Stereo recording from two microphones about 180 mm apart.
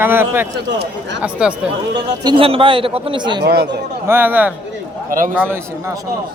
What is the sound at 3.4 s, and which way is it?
Speech, 65° right (ahead or behind).